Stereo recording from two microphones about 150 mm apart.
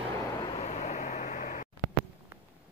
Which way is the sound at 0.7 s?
45° left (ahead or behind).